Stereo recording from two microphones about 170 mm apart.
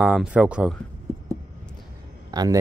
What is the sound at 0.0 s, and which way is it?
Speech, 5° right (ahead or behind).